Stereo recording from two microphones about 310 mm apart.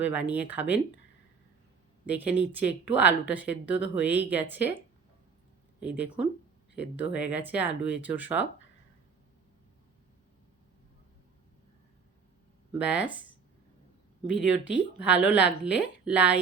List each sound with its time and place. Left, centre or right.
0.0 s a woman's voice: centre
2.0 s a woman's voice: centre
5.8 s a woman's voice: centre
12.8 s a woman's voice: centre
14.3 s speech: left
14.9 s a woman's voice: centre